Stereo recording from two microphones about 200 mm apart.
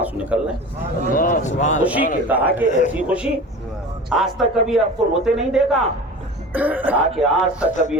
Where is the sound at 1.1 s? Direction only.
40° left (ahead or behind).